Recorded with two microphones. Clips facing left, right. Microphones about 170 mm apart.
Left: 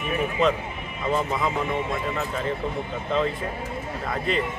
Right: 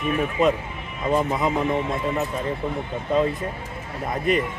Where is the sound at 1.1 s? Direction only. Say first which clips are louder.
Right 3 dB; 15° right (ahead or behind).